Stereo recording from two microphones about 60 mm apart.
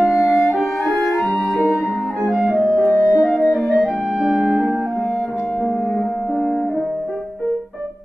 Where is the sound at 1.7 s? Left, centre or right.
Left.